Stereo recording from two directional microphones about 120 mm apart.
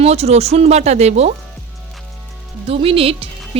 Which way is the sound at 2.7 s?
50° right (ahead or behind).